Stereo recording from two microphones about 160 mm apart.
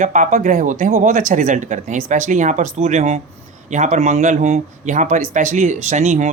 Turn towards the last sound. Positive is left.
turn(degrees=-50)  # may be behind; listen again after turning